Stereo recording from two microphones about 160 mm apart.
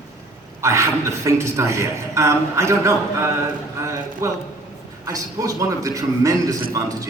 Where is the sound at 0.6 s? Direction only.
20° right (ahead or behind).